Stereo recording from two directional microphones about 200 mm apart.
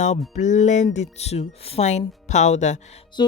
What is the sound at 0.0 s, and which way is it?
Speech, 35° left (ahead or behind).